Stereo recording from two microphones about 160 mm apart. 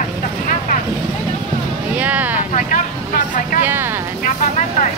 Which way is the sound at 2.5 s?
55° left (ahead or behind).